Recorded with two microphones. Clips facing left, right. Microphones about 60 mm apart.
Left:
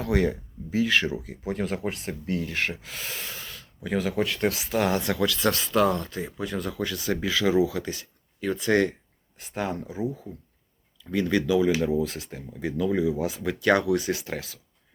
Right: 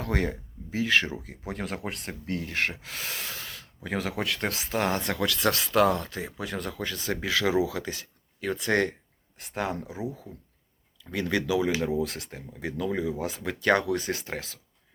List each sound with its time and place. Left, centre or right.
0.0 s speech: right
1.2 s speech: right
3.8 s speech: right
4.4 s speech: right
5.5 s speech: right
6.4 s speech: right
7.3 s speech: right
9.4 s speech: right
11.1 s speech: right
11.9 s speech: right
12.3 s speech: right